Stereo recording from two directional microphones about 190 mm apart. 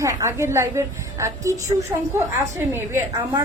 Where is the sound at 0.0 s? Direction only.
15° right (ahead or behind).